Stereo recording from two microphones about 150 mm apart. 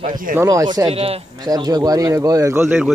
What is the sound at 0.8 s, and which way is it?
Speech, 40° right (ahead or behind).